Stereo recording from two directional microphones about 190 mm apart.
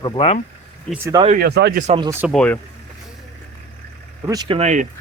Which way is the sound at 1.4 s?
60° right (ahead or behind).